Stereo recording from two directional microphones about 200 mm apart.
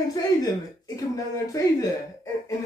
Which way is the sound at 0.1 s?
20° left (ahead or behind).